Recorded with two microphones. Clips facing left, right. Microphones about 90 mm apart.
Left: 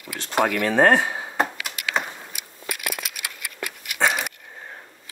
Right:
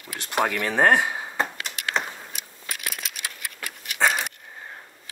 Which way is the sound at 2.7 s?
60° left (ahead or behind).